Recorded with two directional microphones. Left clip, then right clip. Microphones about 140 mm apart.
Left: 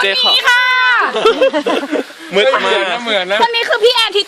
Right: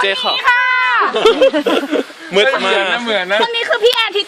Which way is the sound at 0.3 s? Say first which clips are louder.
Right 1 dB; 90° left.